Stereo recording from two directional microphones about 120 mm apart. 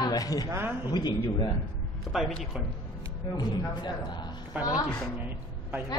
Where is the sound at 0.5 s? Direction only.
20° right (ahead or behind).